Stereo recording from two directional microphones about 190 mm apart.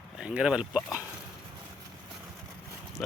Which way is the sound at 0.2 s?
5° right (ahead or behind).